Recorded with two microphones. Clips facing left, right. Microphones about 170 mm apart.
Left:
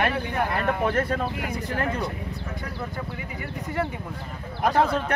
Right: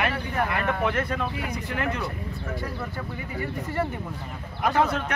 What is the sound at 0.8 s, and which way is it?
Speech, 35° left (ahead or behind).